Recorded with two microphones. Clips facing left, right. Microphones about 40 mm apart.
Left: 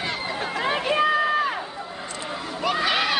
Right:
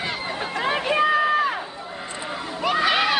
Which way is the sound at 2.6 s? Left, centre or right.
Centre.